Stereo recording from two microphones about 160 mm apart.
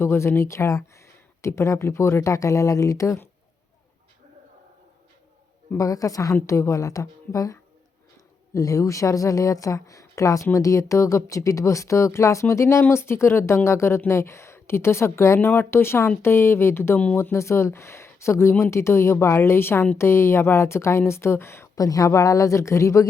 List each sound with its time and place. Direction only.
0.0 s speech: 15° left (ahead or behind)
5.7 s a woman's voice: 20° left (ahead or behind)